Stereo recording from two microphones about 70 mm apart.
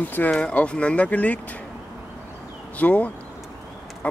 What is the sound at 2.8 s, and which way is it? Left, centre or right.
Speech, left.